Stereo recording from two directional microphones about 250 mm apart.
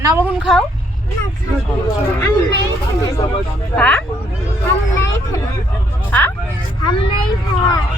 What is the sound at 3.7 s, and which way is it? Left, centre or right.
Speech, centre.